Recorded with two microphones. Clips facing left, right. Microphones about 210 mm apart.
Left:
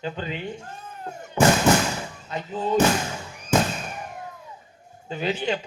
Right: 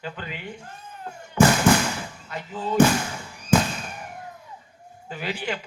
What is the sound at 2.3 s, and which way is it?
Music, 25° left (ahead or behind).